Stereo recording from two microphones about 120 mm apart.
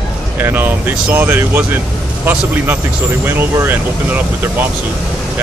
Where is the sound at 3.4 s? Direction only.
15° right (ahead or behind).